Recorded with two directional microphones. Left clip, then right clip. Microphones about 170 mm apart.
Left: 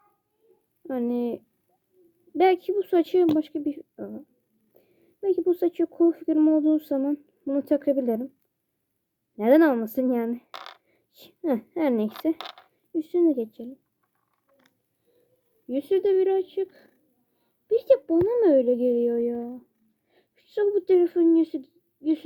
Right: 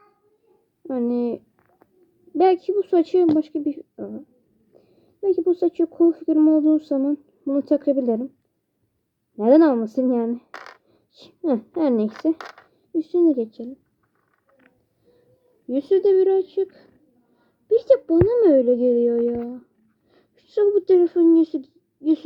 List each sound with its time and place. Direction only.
0.9 s speech: 35° left (ahead or behind)
2.4 s speech: 35° left (ahead or behind)
3.9 s a woman's voice: 25° left (ahead or behind)
4.8 s speech: 40° left (ahead or behind)
9.4 s speech: 35° left (ahead or behind)
15.7 s a child's voice: 30° left (ahead or behind)